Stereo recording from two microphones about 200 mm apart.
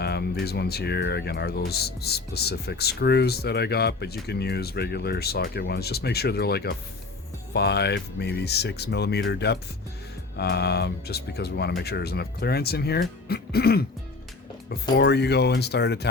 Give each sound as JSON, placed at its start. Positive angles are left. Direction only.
{"t": 0.0, "sound": "speech", "side_deg": 55}